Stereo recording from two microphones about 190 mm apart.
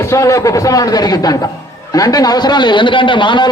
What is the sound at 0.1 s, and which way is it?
A man's voice, 15° left (ahead or behind).